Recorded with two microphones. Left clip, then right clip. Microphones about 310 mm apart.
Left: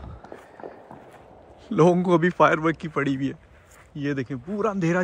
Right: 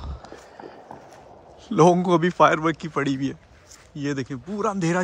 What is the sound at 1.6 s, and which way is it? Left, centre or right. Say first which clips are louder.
A man's voice: right 2 dB; centre.